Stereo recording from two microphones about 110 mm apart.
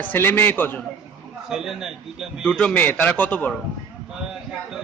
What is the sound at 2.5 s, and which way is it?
A man's voice, 10° left (ahead or behind).